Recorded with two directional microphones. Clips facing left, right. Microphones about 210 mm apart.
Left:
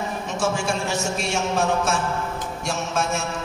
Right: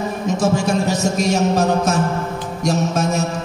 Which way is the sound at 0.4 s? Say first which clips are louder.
Right 6 dB; 40° right (ahead or behind).